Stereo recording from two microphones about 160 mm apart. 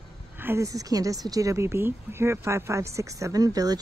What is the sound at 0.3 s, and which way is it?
A woman's voice, 15° right (ahead or behind).